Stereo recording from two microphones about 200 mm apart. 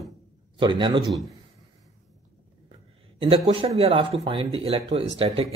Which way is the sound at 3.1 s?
30° right (ahead or behind).